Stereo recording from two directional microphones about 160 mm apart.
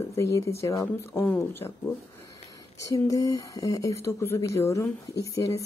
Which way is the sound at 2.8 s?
20° left (ahead or behind).